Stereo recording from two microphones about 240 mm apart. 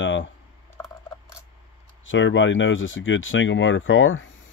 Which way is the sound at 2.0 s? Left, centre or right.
Left.